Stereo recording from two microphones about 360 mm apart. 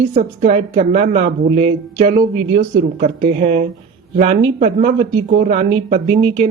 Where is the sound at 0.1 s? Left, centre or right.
Right.